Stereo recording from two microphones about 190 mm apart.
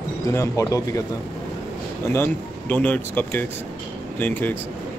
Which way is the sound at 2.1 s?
10° left (ahead or behind).